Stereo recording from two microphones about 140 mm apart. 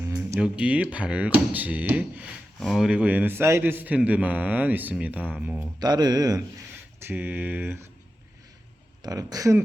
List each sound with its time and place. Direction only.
0.0 s a man's voice: 15° right (ahead or behind)
5.5 s speech: 30° right (ahead or behind)
7.0 s a man's voice: 15° right (ahead or behind)
9.0 s speech: 25° right (ahead or behind)